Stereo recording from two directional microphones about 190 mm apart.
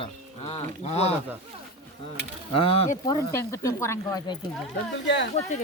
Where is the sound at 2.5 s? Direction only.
30° left (ahead or behind).